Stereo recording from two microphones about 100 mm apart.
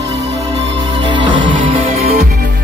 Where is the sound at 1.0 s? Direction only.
55° right (ahead or behind).